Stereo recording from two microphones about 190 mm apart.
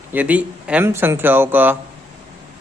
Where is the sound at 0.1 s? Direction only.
10° right (ahead or behind).